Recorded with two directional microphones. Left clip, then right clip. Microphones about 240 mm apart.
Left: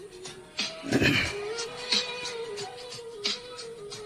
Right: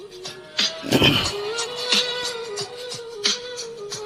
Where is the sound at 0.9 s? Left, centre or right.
Right.